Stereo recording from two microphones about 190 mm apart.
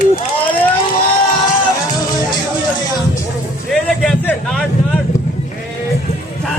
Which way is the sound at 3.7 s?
5° left (ahead or behind).